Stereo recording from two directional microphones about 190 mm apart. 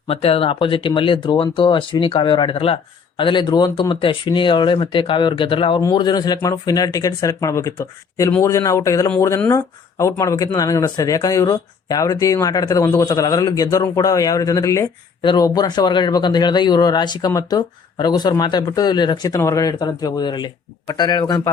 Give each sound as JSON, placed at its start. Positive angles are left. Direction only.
{"t": 0.1, "sound": "speech", "side_deg": 30}